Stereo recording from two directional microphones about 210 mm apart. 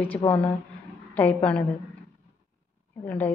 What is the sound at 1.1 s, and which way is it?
Speech, 5° left (ahead or behind).